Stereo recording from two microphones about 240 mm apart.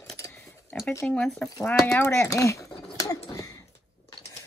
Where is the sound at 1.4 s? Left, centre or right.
Centre.